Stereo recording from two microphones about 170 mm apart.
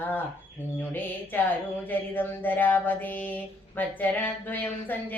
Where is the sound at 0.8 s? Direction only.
10° left (ahead or behind).